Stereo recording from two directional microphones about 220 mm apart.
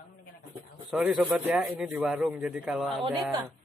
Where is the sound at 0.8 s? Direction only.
Centre (ahead or behind).